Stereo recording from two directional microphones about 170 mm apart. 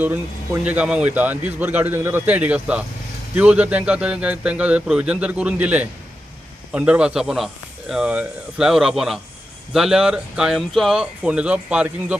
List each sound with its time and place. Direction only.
0.0 s a man's voice: 10° right (ahead or behind)